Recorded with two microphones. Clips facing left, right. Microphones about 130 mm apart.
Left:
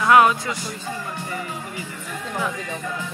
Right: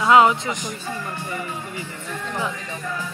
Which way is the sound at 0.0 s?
20° right (ahead or behind).